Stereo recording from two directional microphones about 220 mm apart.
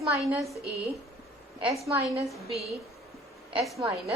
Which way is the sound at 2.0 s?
Centre (ahead or behind).